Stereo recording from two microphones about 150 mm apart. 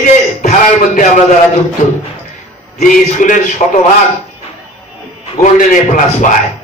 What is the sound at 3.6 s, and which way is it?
Speech, 45° left (ahead or behind).